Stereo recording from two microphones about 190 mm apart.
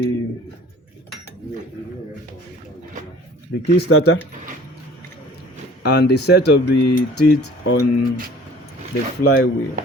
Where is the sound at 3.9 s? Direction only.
90° left.